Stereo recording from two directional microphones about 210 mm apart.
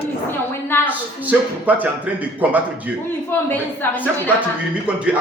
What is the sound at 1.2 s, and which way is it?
A man's voice, 10° right (ahead or behind).